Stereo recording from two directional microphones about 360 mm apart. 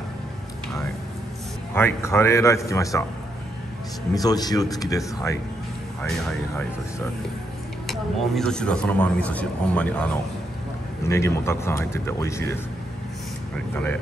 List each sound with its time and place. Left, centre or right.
1.7 s speech: centre
4.1 s speech: centre
7.8 s speech: centre